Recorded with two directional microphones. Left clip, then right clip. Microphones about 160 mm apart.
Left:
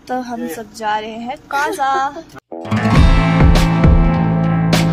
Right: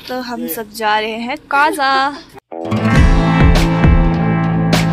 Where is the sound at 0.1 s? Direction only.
5° left (ahead or behind).